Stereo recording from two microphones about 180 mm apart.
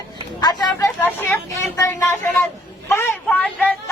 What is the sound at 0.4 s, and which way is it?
Speech, 25° left (ahead or behind).